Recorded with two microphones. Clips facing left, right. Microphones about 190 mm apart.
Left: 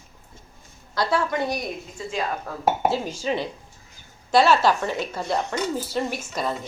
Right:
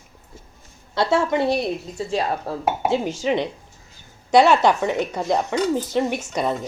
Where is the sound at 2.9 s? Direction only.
20° right (ahead or behind).